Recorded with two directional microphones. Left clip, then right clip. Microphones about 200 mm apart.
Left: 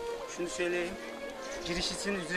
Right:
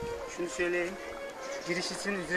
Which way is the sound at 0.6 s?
30° left (ahead or behind).